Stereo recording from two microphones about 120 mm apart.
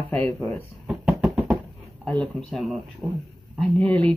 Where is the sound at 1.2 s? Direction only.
5° right (ahead or behind).